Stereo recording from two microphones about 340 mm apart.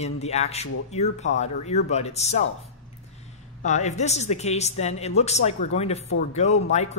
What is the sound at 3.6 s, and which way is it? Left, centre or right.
Speech, centre.